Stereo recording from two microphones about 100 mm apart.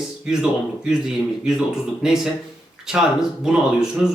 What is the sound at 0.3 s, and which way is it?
Speech, 5° right (ahead or behind).